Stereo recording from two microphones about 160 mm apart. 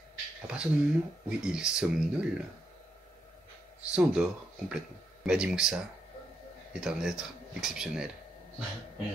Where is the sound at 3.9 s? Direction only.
5° right (ahead or behind).